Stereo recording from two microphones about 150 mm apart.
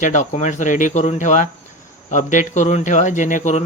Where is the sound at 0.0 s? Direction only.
55° left (ahead or behind).